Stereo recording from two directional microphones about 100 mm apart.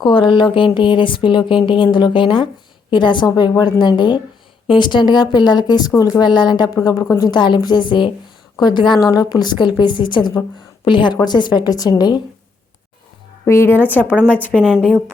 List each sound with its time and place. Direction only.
0.0 s speech: 55° left (ahead or behind)
7.0 s a woman's voice: 30° left (ahead or behind)
7.3 s speech: 50° left (ahead or behind)
13.4 s a woman's voice: 25° left (ahead or behind)
14.6 s a woman's voice: 5° right (ahead or behind)